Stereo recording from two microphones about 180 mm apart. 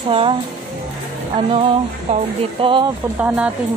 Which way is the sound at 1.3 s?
30° right (ahead or behind).